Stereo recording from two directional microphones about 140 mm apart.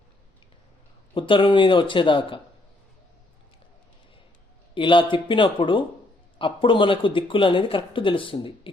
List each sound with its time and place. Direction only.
1.1 s speech: 35° left (ahead or behind)
4.7 s speech: 35° left (ahead or behind)